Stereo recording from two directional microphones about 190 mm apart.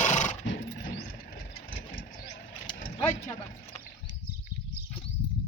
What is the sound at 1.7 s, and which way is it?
Vehicle, 85° left.